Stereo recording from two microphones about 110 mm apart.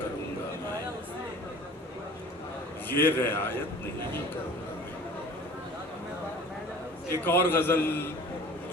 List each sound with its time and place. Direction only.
2.9 s a man's voice: 20° left (ahead or behind)
7.1 s a man's voice: 20° left (ahead or behind)